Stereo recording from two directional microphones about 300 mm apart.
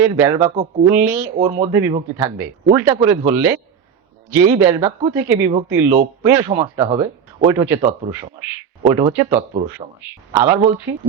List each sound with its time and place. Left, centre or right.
0.0 s speech: centre
0.5 s speech: right
0.9 s speech: centre
1.4 s speech: right